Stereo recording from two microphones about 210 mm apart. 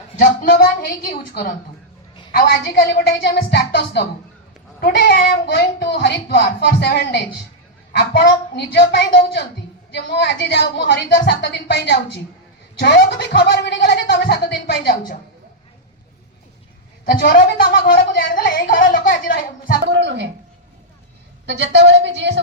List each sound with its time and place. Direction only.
0.2 s a sound: 45° left (ahead or behind)
1.3 s speech: 50° left (ahead or behind)
17.1 s speech: 45° left (ahead or behind)
19.9 s a woman's voice: 55° right (ahead or behind)
21.4 s a woman's voice: 55° right (ahead or behind)